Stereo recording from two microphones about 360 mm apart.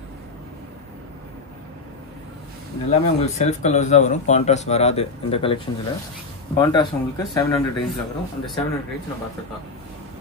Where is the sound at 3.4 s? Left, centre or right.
Centre.